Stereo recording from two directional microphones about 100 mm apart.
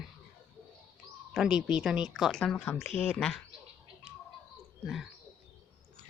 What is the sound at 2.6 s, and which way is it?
Speech, 20° left (ahead or behind).